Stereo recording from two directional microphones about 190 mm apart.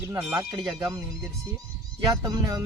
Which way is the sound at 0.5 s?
25° right (ahead or behind).